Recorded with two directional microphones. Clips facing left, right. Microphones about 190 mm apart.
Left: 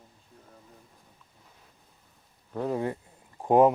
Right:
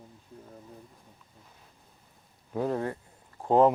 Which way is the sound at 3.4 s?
15° left (ahead or behind).